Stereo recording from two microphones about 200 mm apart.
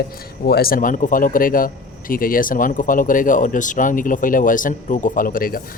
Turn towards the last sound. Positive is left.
turn(degrees=45)  # may be behind; listen again after turning